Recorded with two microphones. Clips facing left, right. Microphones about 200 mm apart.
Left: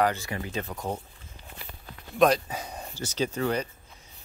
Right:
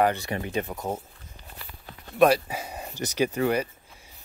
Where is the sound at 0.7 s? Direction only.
5° right (ahead or behind).